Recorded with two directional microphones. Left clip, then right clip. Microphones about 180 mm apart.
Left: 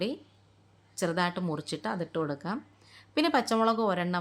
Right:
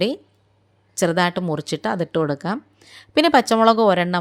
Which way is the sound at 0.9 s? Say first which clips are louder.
Right 10 dB; 40° right (ahead or behind).